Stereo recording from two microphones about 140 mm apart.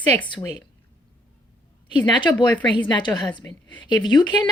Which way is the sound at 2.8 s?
35° left (ahead or behind).